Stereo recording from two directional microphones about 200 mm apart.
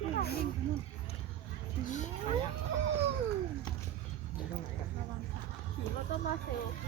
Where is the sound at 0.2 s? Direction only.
50° left (ahead or behind).